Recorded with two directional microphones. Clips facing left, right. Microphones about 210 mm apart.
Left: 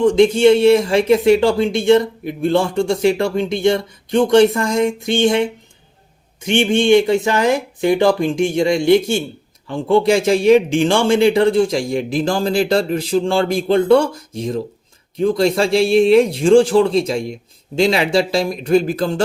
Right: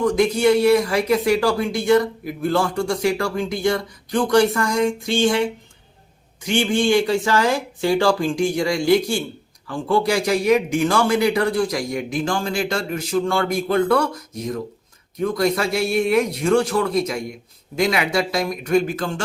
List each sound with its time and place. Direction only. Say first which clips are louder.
0.0 s speech: left 6 dB; 25° left (ahead or behind)